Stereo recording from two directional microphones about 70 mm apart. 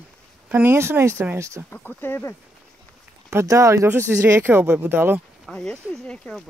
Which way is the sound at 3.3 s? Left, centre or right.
Right.